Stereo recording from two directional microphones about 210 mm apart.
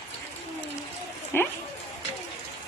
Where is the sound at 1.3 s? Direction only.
10° left (ahead or behind).